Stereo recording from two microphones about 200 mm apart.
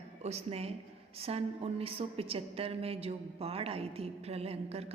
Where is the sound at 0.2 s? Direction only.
30° right (ahead or behind).